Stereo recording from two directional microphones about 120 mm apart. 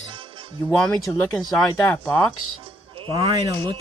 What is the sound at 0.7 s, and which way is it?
Speech, centre (ahead or behind).